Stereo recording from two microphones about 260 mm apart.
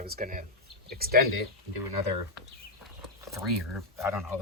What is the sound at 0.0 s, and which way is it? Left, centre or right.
Speech, right.